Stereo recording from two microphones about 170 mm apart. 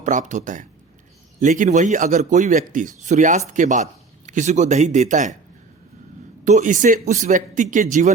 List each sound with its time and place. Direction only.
0.0 s speech: 45° right (ahead or behind)
6.4 s speech: 45° right (ahead or behind)